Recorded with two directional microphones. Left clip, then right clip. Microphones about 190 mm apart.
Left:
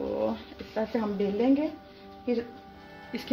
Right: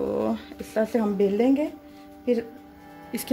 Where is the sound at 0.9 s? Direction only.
75° right (ahead or behind).